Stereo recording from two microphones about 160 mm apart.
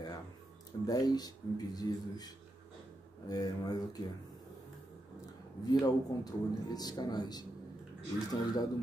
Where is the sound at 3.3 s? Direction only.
25° left (ahead or behind).